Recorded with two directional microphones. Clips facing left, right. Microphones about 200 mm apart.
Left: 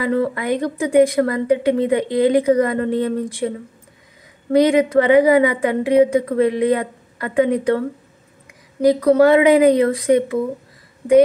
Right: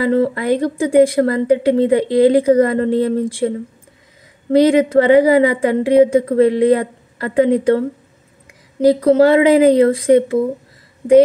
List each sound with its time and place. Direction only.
0.0 s a woman's voice: 30° right (ahead or behind)
8.8 s speech: 30° right (ahead or behind)